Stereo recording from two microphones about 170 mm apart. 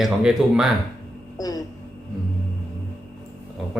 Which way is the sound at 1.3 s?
20° left (ahead or behind).